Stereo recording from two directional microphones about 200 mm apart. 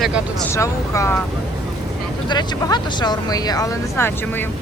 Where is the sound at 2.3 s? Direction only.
20° left (ahead or behind).